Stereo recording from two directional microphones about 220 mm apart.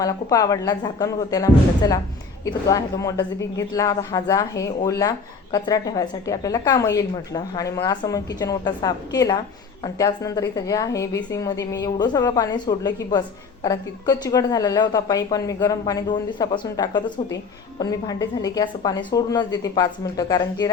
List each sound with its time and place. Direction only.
0.0 s a woman's voice: 15° left (ahead or behind)